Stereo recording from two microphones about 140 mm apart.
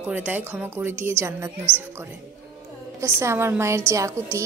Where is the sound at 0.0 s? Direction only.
10° right (ahead or behind).